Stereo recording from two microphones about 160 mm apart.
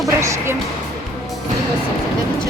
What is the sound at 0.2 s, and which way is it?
Music, 15° right (ahead or behind).